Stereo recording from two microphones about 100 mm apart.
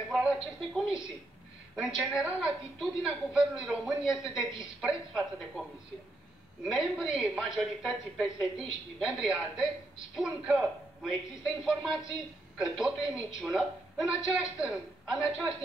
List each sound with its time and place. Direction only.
0.1 s a woman's voice: 5° right (ahead or behind)